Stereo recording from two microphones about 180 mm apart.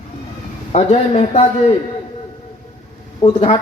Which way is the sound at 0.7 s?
35° left (ahead or behind).